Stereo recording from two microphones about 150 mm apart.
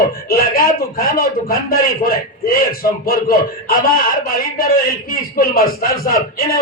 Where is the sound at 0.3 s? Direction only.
85° left.